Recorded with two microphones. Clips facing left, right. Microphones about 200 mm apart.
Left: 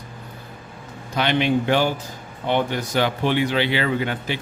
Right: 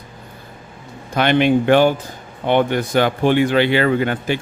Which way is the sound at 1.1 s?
55° right (ahead or behind).